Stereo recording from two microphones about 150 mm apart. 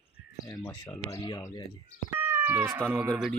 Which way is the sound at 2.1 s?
15° right (ahead or behind).